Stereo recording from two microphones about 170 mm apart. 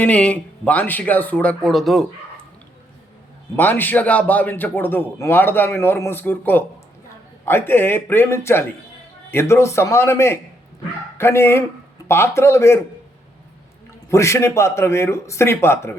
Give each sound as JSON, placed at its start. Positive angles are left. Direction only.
{"t": 0.0, "sound": "a man's voice", "side_deg": 10}
{"t": 3.5, "sound": "a man's voice", "side_deg": 10}
{"t": 14.1, "sound": "a man's voice", "side_deg": 15}